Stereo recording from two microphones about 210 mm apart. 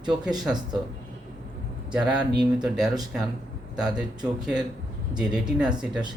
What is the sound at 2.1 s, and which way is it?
Speech, 20° right (ahead or behind).